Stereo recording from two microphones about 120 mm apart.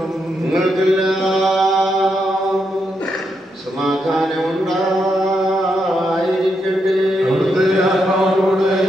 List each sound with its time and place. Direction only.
0.6 s mantra: centre (ahead or behind)
3.8 s a sound: centre (ahead or behind)
7.3 s chant: centre (ahead or behind)